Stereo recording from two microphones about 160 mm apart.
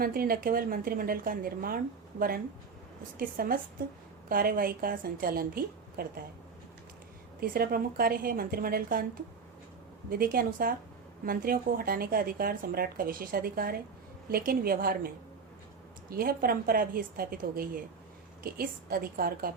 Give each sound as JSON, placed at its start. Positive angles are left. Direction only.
{"t": 0.0, "sound": "speech", "side_deg": -65}
{"t": 7.3, "sound": "a woman's voice", "side_deg": -65}
{"t": 10.1, "sound": "a woman's voice", "side_deg": -65}